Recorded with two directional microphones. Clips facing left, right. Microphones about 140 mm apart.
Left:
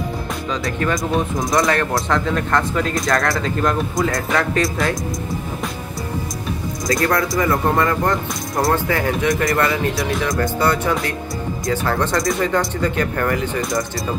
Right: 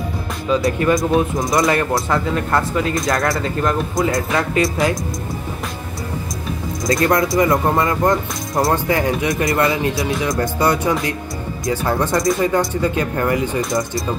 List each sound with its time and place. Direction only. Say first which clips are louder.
0.5 s speech: right 6 dB; 5° right (ahead or behind)
6.9 s speech: right 3 dB; 20° right (ahead or behind)
13.6 s speech: right 2 dB; centre (ahead or behind)